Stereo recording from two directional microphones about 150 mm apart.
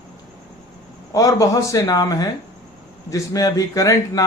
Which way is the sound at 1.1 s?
25° left (ahead or behind).